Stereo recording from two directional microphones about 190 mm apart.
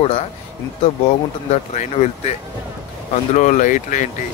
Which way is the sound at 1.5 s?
40° left (ahead or behind).